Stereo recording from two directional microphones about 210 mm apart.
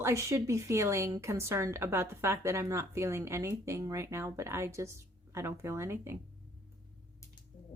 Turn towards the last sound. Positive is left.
turn(degrees=-10)  # may be behind; listen again after turning